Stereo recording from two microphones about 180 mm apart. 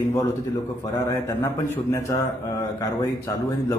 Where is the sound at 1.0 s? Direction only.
15° left (ahead or behind).